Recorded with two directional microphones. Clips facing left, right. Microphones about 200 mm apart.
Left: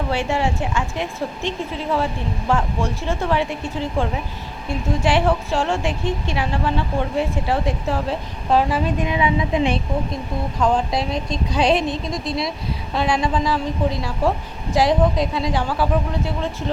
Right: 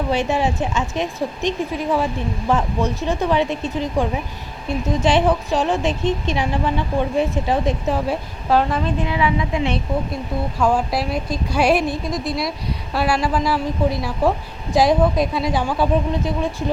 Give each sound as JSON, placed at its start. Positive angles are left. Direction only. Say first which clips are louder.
{"t": 0.1, "sound": "a woman's voice", "louder": "right 2 dB", "side_deg": -20}
{"t": 8.4, "sound": "a woman's voice", "louder": "even", "side_deg": 0}
{"t": 8.8, "sound": "a woman's voice", "louder": "even", "side_deg": 20}
{"t": 10.6, "sound": "a woman's voice", "louder": "even", "side_deg": -5}
{"t": 12.9, "sound": "a woman's voice", "louder": "right 1 dB", "side_deg": -5}